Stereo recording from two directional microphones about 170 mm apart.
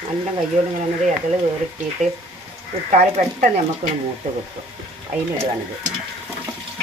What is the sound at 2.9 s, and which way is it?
Speech, 45° right (ahead or behind).